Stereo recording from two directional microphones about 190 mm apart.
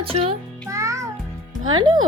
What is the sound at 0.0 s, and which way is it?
Speech, 30° right (ahead or behind).